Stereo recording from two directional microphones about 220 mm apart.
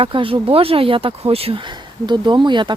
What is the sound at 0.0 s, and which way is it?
Speech, 25° right (ahead or behind).